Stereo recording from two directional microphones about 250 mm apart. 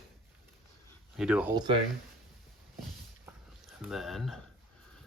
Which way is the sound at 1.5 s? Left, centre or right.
Centre.